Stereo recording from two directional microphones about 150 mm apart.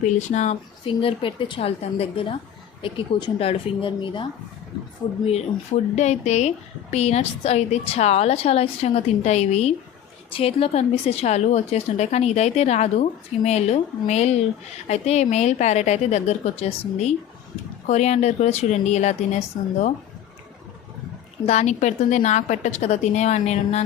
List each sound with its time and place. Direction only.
0.0 s a woman's voice: 50° left (ahead or behind)
0.9 s a woman's voice: 35° left (ahead or behind)
6.0 s a woman's voice: 50° left (ahead or behind)
21.4 s a woman's voice: 50° left (ahead or behind)